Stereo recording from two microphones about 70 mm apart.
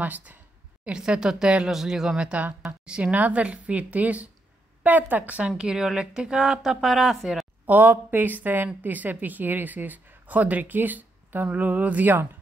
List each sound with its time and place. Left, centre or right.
0.0 s speech: right
0.8 s speech: centre
5.6 s speech: centre
7.6 s speech: right